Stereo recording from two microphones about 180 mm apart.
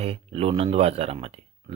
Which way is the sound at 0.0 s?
35° right (ahead or behind).